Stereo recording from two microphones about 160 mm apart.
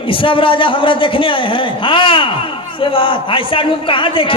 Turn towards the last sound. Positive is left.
turn(degrees=35)  # may be behind; listen again after turning